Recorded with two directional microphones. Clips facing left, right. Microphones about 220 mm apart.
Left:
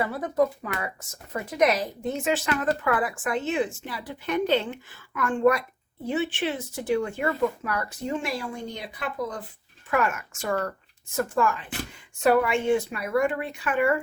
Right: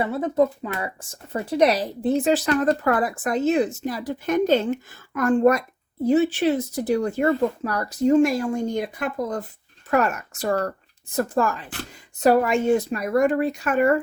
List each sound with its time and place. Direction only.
0.0 s speech: 25° right (ahead or behind); by 14.0 s 40° right (ahead or behind)